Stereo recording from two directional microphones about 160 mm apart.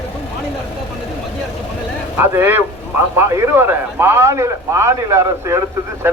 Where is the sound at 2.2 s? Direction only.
15° right (ahead or behind).